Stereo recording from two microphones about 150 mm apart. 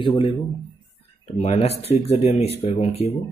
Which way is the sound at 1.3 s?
45° left (ahead or behind).